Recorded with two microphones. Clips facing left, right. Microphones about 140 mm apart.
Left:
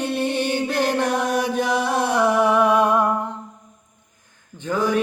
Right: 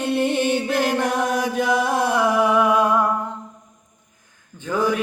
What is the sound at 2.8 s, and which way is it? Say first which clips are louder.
Music: left 1 dB; 20° left (ahead or behind).